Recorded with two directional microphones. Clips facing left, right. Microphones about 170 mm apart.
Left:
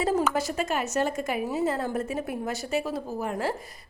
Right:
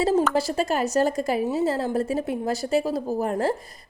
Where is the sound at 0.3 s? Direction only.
35° right (ahead or behind).